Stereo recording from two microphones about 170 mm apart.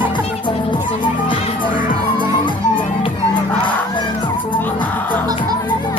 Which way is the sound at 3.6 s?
30° left (ahead or behind).